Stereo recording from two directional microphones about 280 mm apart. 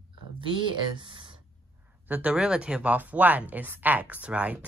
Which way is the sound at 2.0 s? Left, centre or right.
Centre.